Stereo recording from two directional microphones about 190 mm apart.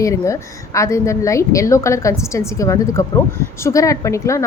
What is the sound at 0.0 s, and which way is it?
A woman's voice, 15° left (ahead or behind).